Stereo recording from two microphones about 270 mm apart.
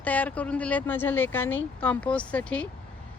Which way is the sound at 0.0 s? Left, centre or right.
Centre.